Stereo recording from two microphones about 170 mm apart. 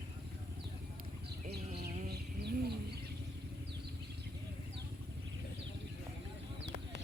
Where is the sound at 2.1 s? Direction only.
70° right (ahead or behind).